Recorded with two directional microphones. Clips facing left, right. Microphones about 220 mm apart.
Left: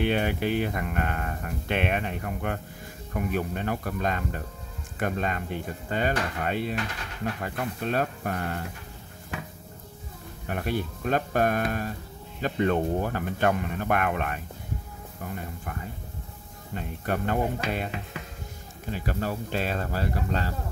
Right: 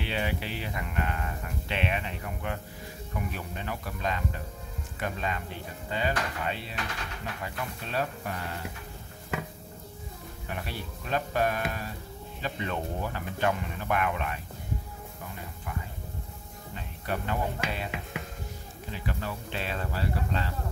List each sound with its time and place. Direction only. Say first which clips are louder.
0.0 s speech: left 7 dB; 50° left (ahead or behind)
10.5 s speech: left 9 dB; 50° left (ahead or behind)
16.7 s speech: left 5 dB; 50° left (ahead or behind)
18.9 s speech: left 5 dB; 40° left (ahead or behind)